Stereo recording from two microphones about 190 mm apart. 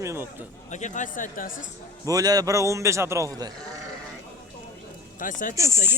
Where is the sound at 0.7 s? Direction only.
40° left (ahead or behind).